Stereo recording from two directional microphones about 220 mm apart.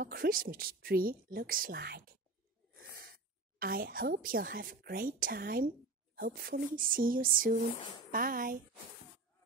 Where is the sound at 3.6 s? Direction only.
40° right (ahead or behind).